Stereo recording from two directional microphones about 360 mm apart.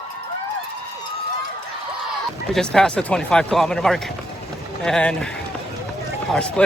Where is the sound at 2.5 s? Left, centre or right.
Centre.